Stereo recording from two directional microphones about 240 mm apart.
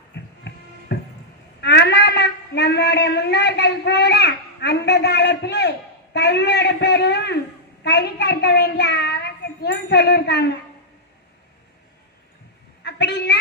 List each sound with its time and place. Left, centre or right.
0.9 s music: left
1.6 s a child's voice: left
12.8 s a woman's voice: left